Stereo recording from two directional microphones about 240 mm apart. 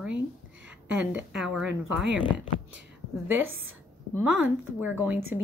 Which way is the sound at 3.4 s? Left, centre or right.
Right.